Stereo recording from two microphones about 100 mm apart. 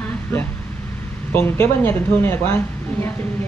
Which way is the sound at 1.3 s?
20° left (ahead or behind).